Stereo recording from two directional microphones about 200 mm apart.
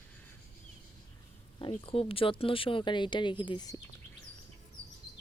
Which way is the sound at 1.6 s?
25° left (ahead or behind).